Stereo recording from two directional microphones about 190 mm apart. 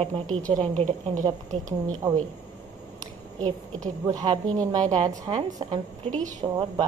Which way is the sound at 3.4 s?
20° right (ahead or behind).